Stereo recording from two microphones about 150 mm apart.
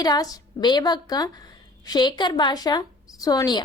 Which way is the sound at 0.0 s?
25° left (ahead or behind).